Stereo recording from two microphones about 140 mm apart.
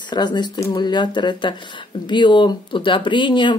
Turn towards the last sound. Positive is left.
turn(degrees=35)  # may be behind; listen again after turning